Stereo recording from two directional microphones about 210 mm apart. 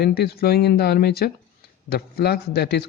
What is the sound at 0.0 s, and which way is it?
A man's voice, 50° left (ahead or behind).